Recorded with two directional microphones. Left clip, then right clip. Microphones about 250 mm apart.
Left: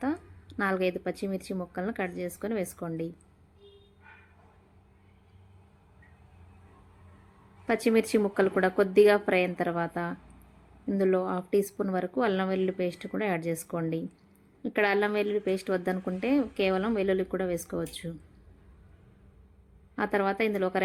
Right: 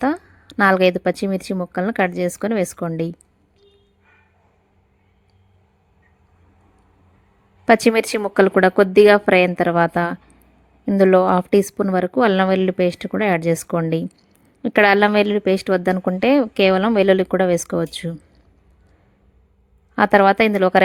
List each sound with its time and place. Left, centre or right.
0.0 s a woman's voice: right
7.6 s a woman's voice: right
20.0 s a woman's voice: right